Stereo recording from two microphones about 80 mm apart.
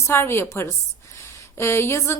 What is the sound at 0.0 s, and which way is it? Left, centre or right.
A woman's voice, left.